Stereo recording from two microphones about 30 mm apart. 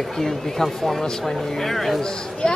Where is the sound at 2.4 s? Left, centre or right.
Left.